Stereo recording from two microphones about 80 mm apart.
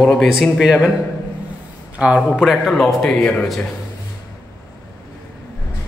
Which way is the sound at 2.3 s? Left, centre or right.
Centre.